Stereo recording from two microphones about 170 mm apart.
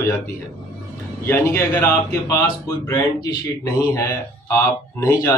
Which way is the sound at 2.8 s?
20° left (ahead or behind).